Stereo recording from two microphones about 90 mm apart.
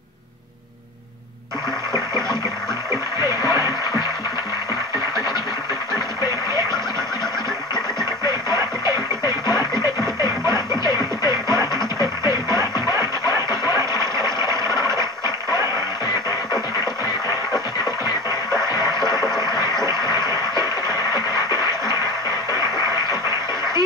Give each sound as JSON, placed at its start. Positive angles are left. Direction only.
{"t": 2.9, "sound": "music", "side_deg": -35}
{"t": 8.0, "sound": "music", "side_deg": -35}
{"t": 9.8, "sound": "music", "side_deg": 55}
{"t": 10.5, "sound": "music", "side_deg": -40}
{"t": 14.1, "sound": "a sound", "side_deg": -35}
{"t": 18.9, "sound": "a sound", "side_deg": -40}
{"t": 20.9, "sound": "music", "side_deg": -35}